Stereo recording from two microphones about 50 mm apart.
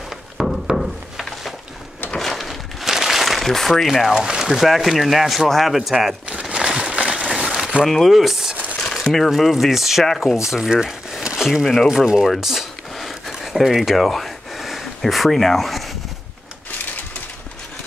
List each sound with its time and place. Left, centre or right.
0.4 s a sound: centre
3.8 s speech: centre
4.1 s speech: centre
6.4 s a sound: centre
7.8 s speech: centre
8.7 s speech: centre
10.7 s crumpling: centre
11.6 s speech: centre
12.3 s a sound: centre
15.0 s speech: centre